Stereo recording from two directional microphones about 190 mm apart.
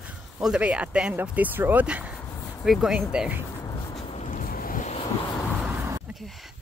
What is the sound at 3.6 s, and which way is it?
Boat, 20° left (ahead or behind).